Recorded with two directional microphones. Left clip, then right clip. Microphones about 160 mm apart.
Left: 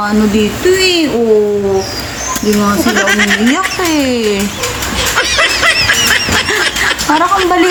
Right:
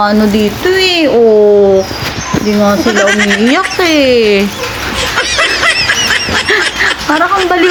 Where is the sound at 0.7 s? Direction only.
25° right (ahead or behind).